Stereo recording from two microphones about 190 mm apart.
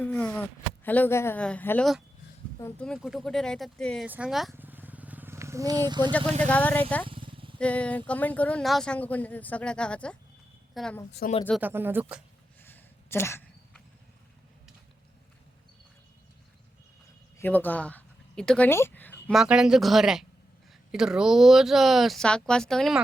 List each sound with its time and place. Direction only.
0.0 s speech: 10° left (ahead or behind)
4.5 s vehicle: 10° right (ahead or behind)
6.4 s speech: 10° left (ahead or behind)
7.1 s vehicle: 25° right (ahead or behind)
7.6 s speech: 5° left (ahead or behind)
11.2 s speech: 50° left (ahead or behind)
11.6 s speech: 10° right (ahead or behind)
12.6 s a sound: 10° left (ahead or behind)
17.3 s speech: 10° left (ahead or behind)
19.3 s speech: 5° right (ahead or behind)